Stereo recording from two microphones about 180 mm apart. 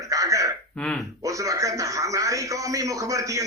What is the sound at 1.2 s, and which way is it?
A man's voice, 20° right (ahead or behind).